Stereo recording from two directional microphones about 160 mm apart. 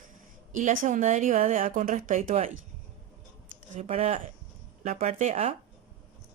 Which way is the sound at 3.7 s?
45° right (ahead or behind).